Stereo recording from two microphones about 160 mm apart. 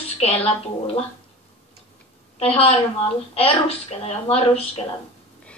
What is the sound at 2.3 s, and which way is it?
A woman's voice, 35° left (ahead or behind).